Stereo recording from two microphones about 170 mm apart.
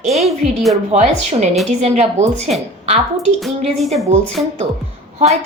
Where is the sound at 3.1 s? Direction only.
Centre (ahead or behind).